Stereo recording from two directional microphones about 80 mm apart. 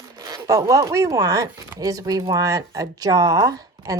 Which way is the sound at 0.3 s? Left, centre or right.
Right.